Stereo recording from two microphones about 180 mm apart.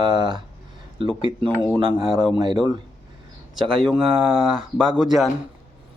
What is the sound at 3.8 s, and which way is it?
Speech, centre (ahead or behind).